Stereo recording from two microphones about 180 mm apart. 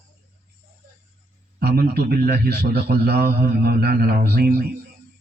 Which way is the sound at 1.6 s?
60° right (ahead or behind).